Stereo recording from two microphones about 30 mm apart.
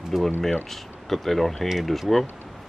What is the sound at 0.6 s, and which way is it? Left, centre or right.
Speech, centre.